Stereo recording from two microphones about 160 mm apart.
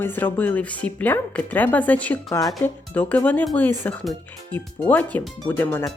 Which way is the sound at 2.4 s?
20° left (ahead or behind).